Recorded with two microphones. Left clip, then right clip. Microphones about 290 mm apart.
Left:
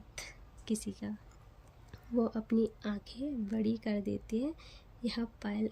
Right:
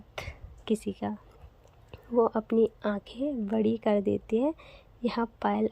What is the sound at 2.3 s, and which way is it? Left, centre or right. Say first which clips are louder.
Speech: right 8 dB; centre.